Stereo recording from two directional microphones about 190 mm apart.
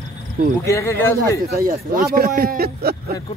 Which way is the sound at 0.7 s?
15° left (ahead or behind).